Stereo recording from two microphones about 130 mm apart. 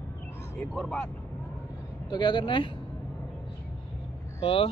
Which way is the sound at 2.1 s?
35° left (ahead or behind).